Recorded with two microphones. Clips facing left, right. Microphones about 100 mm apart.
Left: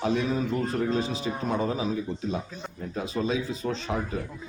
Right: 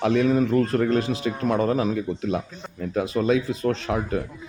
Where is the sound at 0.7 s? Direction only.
70° right (ahead or behind).